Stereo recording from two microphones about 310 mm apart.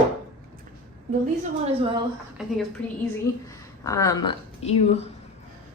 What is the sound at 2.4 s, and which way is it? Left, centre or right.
Speech, centre.